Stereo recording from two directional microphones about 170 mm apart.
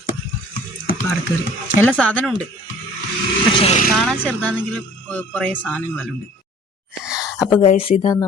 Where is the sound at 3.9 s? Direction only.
5° left (ahead or behind).